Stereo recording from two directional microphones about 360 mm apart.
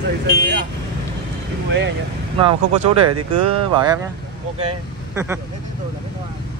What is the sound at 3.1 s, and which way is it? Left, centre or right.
Speech, right.